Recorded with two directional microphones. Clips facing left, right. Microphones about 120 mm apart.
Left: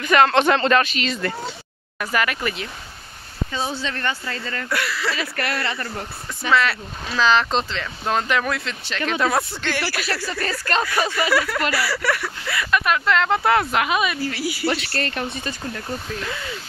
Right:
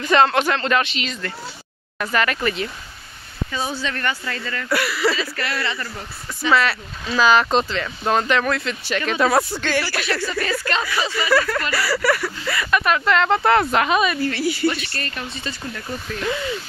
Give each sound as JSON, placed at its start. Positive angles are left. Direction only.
{"t": 0.0, "sound": "speech", "side_deg": -25}
{"t": 0.5, "sound": "speech", "side_deg": 5}
{"t": 0.7, "sound": "speech", "side_deg": -15}
{"t": 2.0, "sound": "speech", "side_deg": 10}
{"t": 3.5, "sound": "speech", "side_deg": 25}
{"t": 4.6, "sound": "speech", "side_deg": -10}
{"t": 5.1, "sound": "speech", "side_deg": 55}
{"t": 6.5, "sound": "speech", "side_deg": -5}
{"t": 8.6, "sound": "speech", "side_deg": -5}
{"t": 10.7, "sound": "speech", "side_deg": 45}
{"t": 11.1, "sound": "speech", "side_deg": 5}
{"t": 14.7, "sound": "speech", "side_deg": 85}
{"t": 15.1, "sound": "speech", "side_deg": 55}